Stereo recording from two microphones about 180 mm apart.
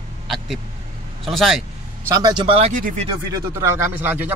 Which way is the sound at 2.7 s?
50° right (ahead or behind).